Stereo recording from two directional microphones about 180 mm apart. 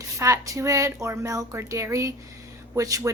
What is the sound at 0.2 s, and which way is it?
Speech, 15° right (ahead or behind).